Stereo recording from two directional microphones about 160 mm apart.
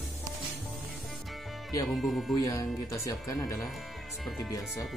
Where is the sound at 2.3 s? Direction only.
20° left (ahead or behind).